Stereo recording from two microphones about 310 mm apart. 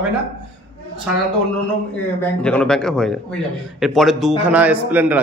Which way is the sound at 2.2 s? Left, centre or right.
Centre.